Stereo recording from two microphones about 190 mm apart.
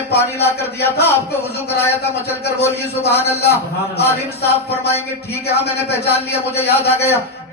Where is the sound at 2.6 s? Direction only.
60° left (ahead or behind).